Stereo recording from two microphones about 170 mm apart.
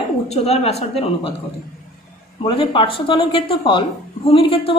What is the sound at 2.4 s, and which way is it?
Speech, 30° left (ahead or behind).